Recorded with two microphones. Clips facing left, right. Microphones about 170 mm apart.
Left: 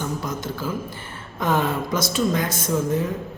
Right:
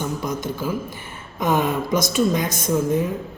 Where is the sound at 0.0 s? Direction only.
15° right (ahead or behind).